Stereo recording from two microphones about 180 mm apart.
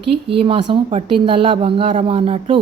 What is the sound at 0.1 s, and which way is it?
A woman's voice, 30° right (ahead or behind).